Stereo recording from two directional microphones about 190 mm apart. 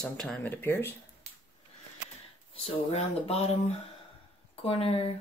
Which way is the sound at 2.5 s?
35° left (ahead or behind).